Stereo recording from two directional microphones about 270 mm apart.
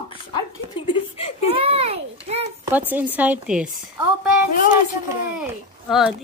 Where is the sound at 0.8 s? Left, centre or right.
Left.